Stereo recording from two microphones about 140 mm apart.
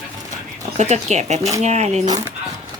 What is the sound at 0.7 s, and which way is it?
Speech, 55° right (ahead or behind).